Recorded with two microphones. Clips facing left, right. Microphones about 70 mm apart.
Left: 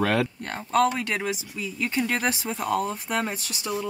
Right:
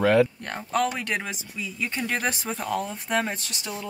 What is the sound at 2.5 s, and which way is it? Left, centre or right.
Speech, centre.